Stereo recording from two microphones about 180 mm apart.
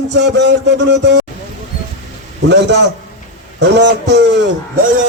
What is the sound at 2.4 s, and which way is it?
Speech, 70° right (ahead or behind).